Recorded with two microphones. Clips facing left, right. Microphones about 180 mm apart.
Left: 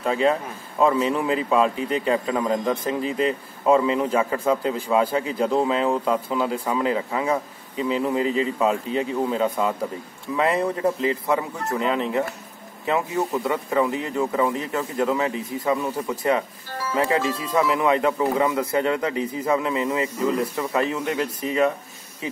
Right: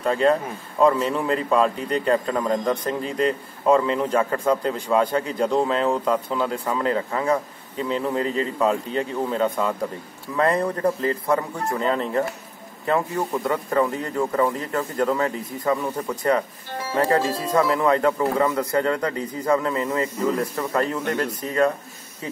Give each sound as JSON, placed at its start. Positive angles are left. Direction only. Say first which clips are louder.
{"t": 0.0, "sound": "speech", "louder": "right 2 dB", "side_deg": 5}
{"t": 17.2, "sound": "speech", "louder": "right 1 dB", "side_deg": -40}
{"t": 17.6, "sound": "speech", "louder": "right 1 dB", "side_deg": 5}